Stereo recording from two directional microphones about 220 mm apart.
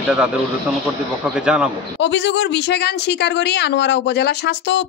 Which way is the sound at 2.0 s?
55° left (ahead or behind).